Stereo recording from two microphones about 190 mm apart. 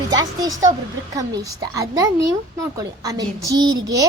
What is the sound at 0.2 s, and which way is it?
A woman's voice, 20° right (ahead or behind).